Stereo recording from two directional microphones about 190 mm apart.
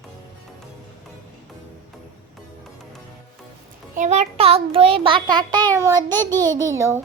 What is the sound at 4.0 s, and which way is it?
A child's voice, 35° right (ahead or behind).